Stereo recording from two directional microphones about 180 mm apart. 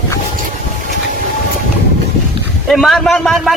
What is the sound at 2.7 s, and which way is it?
Speech, centre (ahead or behind).